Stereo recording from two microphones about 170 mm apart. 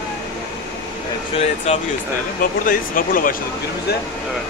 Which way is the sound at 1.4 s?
40° left (ahead or behind).